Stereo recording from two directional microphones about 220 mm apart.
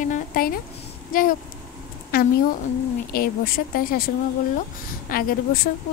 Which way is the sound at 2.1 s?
45° left (ahead or behind).